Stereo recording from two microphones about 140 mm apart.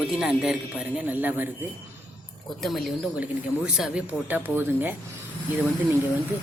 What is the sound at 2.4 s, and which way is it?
Speech, centre (ahead or behind).